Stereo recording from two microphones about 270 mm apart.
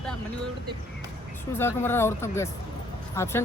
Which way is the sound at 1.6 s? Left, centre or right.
Centre.